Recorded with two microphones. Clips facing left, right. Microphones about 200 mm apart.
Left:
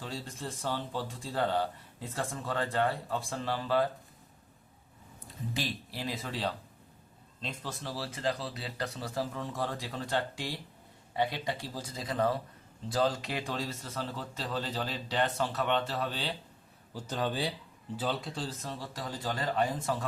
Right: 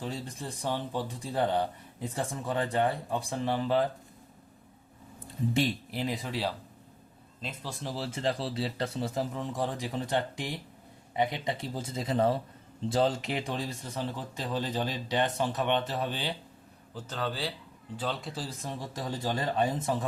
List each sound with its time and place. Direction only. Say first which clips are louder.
0.0 s speech: right 3 dB; 15° right (ahead or behind)
5.5 s speech: right 7 dB; 25° right (ahead or behind)
16.9 s speech: left 1 dB; 15° left (ahead or behind)
17.9 s speech: left 1 dB; 5° left (ahead or behind); by 20.1 s 20° right (ahead or behind)